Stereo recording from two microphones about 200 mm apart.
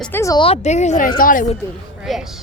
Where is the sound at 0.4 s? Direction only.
30° left (ahead or behind).